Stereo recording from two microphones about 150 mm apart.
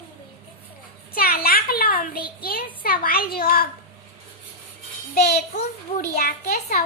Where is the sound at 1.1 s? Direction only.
85° left.